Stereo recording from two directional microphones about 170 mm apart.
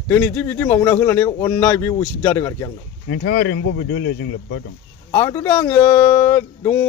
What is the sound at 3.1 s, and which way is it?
Speech, 75° left (ahead or behind).